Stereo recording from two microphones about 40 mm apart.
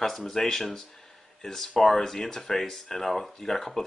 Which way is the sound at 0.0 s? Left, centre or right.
Centre.